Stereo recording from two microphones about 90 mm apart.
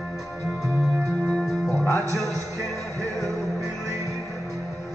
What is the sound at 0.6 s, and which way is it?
Music, 5° left (ahead or behind).